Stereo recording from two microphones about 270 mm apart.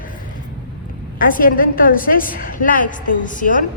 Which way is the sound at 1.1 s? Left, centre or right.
Left.